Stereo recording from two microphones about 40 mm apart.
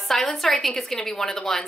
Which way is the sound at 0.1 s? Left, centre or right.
Centre.